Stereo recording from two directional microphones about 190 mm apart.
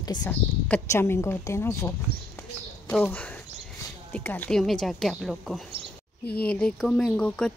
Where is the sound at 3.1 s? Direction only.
10° left (ahead or behind).